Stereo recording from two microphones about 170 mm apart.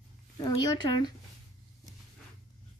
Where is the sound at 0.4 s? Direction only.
25° left (ahead or behind).